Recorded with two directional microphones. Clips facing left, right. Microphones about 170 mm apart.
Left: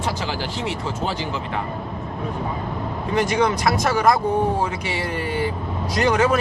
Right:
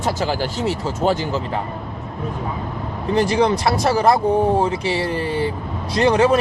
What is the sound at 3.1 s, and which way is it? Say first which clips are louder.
Speech: right 3 dB; 30° right (ahead or behind).